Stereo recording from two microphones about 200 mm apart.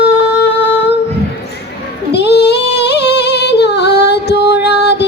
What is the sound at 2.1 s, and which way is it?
Singing, 55° left (ahead or behind).